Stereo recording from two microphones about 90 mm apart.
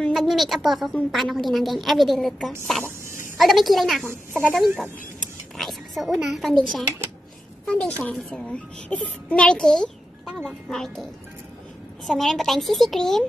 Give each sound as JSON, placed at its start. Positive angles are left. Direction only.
{"t": 0.1, "sound": "a woman's voice", "side_deg": 0}
{"t": 4.3, "sound": "speech", "side_deg": -15}
{"t": 4.6, "sound": "a woman's voice", "side_deg": 0}
{"t": 12.1, "sound": "a woman's voice", "side_deg": 0}